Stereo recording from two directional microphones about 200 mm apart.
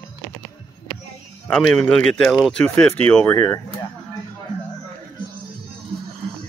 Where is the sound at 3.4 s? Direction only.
20° left (ahead or behind).